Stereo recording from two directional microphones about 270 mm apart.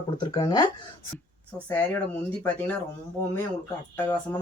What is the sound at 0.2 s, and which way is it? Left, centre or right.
Speech, centre.